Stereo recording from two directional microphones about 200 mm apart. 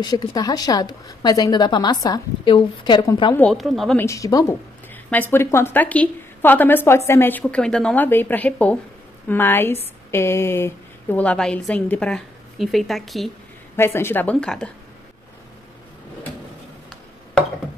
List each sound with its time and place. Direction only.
0.0 s a woman's voice: 20° left (ahead or behind)
3.3 s a woman's voice: centre (ahead or behind)
4.0 s a woman's voice: 15° left (ahead or behind)
13.7 s a woman's voice: 10° left (ahead or behind)